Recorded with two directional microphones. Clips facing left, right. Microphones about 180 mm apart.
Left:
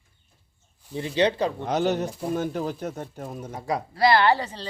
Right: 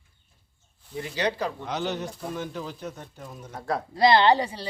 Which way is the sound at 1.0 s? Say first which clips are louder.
Left 5 dB; 25° left (ahead or behind).